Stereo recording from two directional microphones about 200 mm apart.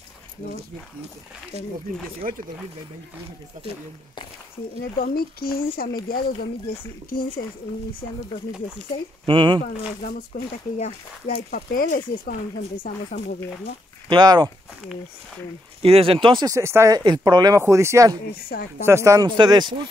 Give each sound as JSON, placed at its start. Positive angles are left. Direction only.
{"t": 2.2, "sound": "speech", "side_deg": -40}
{"t": 4.9, "sound": "speech", "side_deg": 45}
{"t": 9.2, "sound": "speech", "side_deg": -25}
{"t": 10.3, "sound": "speech", "side_deg": 45}
{"t": 14.0, "sound": "speech", "side_deg": -20}
{"t": 15.8, "sound": "speech", "side_deg": -30}
{"t": 18.5, "sound": "speech", "side_deg": 50}
{"t": 18.9, "sound": "speech", "side_deg": -15}